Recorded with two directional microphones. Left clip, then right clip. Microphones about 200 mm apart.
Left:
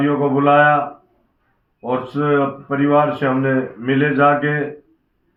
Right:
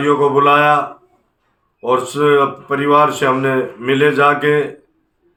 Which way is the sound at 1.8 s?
30° right (ahead or behind).